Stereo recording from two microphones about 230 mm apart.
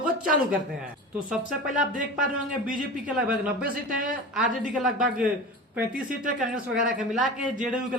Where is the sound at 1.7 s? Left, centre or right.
Right.